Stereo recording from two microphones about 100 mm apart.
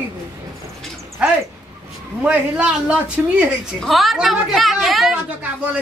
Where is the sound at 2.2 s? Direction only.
10° right (ahead or behind).